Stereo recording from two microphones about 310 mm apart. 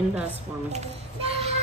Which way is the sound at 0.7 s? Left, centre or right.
Centre.